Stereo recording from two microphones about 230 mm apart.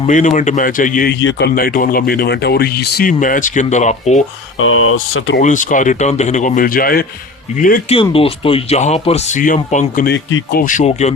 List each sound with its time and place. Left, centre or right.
0.1 s speech: left
1.2 s speech: left
1.5 s speech: left
4.6 s speech: left
5.4 s speech: left
7.9 s speech: left